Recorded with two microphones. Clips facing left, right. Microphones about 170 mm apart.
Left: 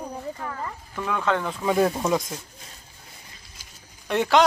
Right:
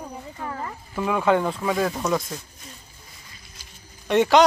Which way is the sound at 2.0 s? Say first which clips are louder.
Even; 15° left (ahead or behind).